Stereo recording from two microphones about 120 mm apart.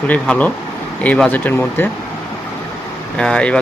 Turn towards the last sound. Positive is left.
turn(degrees=10)  # may be behind; listen again after turning